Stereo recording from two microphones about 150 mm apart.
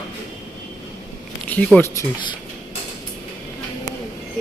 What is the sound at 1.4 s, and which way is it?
Speech, 10° left (ahead or behind).